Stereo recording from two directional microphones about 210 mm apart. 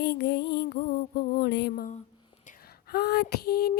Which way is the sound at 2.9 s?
50° left (ahead or behind).